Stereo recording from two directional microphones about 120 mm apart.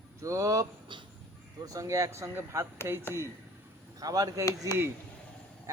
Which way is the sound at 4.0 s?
30° right (ahead or behind).